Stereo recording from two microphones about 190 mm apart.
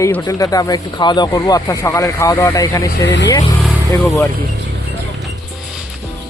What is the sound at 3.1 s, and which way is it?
Speech, 65° left (ahead or behind).